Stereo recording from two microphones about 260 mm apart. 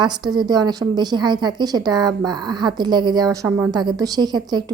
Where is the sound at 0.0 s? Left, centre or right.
Centre.